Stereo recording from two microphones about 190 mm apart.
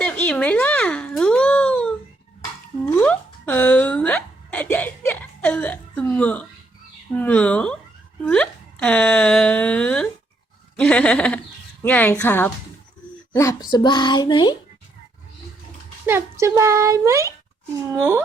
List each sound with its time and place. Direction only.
0.0 s a sound: 5° left (ahead or behind)
13.3 s speech: 15° left (ahead or behind)
16.0 s a child's voice: 15° right (ahead or behind)